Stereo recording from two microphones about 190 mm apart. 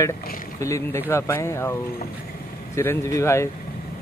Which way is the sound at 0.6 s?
15° left (ahead or behind).